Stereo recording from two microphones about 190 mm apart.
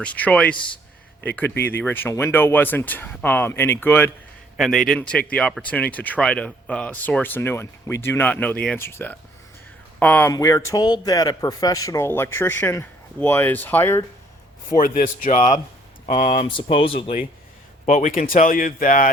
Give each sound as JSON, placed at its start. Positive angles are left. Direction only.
{"t": 0.0, "sound": "speech", "side_deg": 5}
{"t": 14.8, "sound": "speech", "side_deg": 45}
{"t": 17.8, "sound": "speech", "side_deg": 40}